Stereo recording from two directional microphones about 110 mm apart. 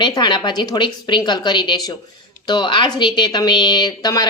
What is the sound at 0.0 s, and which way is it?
A woman's voice, 45° left (ahead or behind).